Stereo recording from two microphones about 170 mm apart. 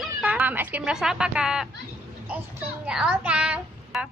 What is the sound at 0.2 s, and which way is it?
Speech, 10° right (ahead or behind).